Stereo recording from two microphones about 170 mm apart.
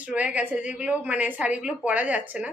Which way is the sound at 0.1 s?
10° right (ahead or behind).